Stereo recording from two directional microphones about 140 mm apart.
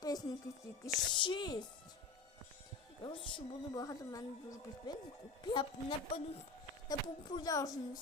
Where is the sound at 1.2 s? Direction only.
30° left (ahead or behind).